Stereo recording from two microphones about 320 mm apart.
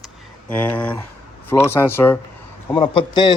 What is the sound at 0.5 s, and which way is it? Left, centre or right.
Speech, centre.